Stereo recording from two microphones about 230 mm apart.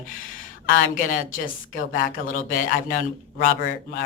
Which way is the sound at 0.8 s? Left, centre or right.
Left.